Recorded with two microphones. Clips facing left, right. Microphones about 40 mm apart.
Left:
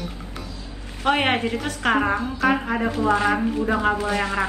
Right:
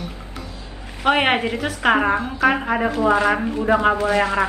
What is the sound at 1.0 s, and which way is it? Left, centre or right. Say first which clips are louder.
Speech: right 3 dB; right.